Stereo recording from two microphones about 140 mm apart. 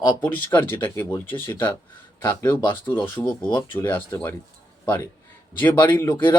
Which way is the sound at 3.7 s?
15° left (ahead or behind).